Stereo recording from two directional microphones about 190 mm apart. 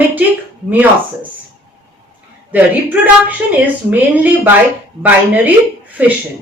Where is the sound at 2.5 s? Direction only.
10° right (ahead or behind).